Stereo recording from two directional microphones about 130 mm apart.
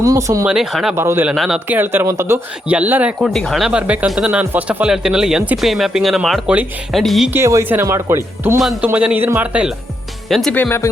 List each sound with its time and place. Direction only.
0.0 s speech: 25° right (ahead or behind)
0.4 s speech: 5° right (ahead or behind)
0.9 s speech: 20° right (ahead or behind)
1.3 s speech: 5° right (ahead or behind)
1.6 s speech: 15° right (ahead or behind); by 7.3 s centre (ahead or behind)
7.3 s speech: 20° right (ahead or behind)
8.8 s speech: 10° right (ahead or behind)
10.5 s speech: 15° left (ahead or behind)